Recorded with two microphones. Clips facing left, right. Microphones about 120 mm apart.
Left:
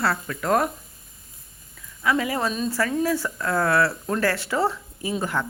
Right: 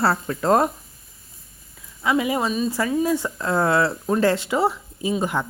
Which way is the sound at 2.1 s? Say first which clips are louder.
Right 4 dB; 15° right (ahead or behind).